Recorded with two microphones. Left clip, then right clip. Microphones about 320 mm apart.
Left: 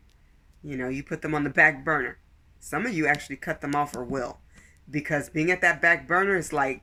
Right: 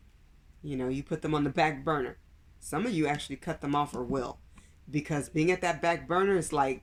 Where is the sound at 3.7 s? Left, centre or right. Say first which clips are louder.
Left 1 dB; centre.